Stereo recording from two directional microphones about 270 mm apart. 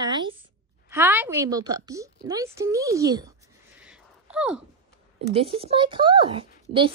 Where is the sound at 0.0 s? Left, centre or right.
Centre.